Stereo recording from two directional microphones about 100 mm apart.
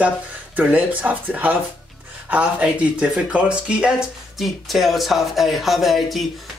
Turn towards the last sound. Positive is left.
turn(degrees=0)  # may be behind; listen again after turning